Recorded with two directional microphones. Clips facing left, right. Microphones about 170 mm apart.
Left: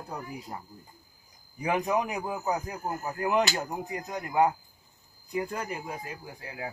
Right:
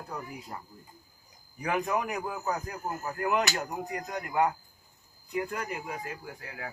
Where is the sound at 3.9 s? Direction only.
25° left (ahead or behind).